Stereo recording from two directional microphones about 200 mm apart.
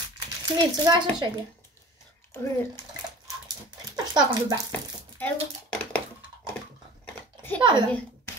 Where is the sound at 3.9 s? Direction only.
20° right (ahead or behind).